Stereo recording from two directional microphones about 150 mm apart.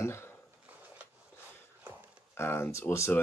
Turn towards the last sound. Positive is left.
turn(degrees=15)  # may be behind; listen again after turning